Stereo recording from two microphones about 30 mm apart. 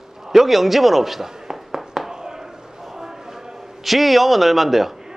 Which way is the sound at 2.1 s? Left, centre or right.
Centre.